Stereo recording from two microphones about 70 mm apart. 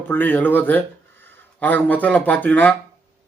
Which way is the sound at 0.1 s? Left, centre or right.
Left.